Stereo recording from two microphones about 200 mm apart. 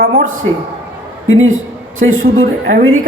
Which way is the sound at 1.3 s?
85° right.